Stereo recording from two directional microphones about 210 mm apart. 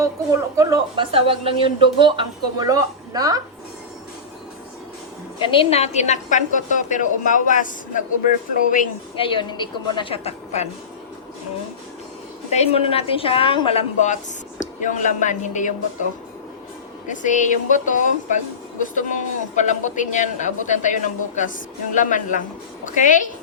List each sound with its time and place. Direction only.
0.0 s a woman's voice: 15° right (ahead or behind)
5.4 s a man's voice: 25° left (ahead or behind)
9.1 s a woman's voice: 25° left (ahead or behind)
12.5 s a woman's voice: 30° left (ahead or behind)
17.1 s a man's voice: 35° left (ahead or behind)